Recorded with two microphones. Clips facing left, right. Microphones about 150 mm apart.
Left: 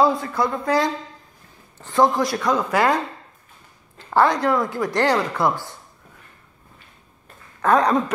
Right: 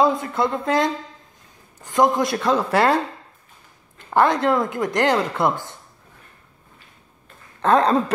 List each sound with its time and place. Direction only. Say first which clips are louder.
0.0 s speech: even; 20° right (ahead or behind)
4.1 s speech: even; 20° right (ahead or behind)
7.6 s speech: right 1 dB; 25° right (ahead or behind)